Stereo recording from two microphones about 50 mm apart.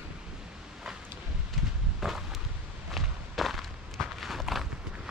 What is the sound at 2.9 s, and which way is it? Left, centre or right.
Walk, centre.